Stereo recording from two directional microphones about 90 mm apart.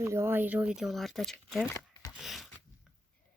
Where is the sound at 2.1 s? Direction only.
5° right (ahead or behind).